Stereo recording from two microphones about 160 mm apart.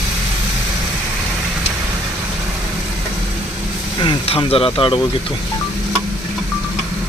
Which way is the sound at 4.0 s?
35° left (ahead or behind).